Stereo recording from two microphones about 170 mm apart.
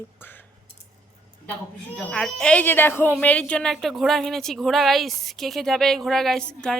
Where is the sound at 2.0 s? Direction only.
5° left (ahead or behind).